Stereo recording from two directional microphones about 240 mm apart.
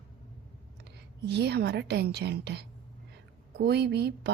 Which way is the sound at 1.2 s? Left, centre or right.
Right.